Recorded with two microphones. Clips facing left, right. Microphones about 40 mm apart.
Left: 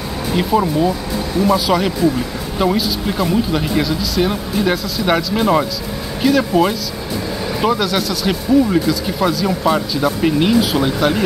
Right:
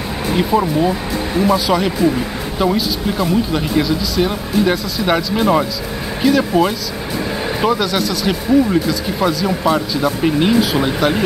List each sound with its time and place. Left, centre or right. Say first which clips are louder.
0.4 s speech: even; centre